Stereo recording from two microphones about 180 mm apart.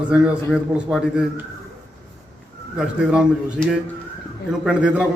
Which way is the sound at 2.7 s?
5° right (ahead or behind).